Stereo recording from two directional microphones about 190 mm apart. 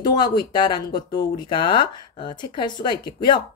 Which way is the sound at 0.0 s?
20° left (ahead or behind).